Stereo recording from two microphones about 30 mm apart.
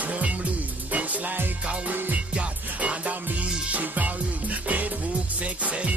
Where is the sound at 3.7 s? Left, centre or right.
Right.